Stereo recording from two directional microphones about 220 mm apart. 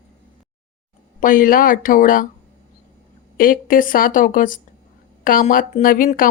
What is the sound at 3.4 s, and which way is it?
Speech, 40° left (ahead or behind).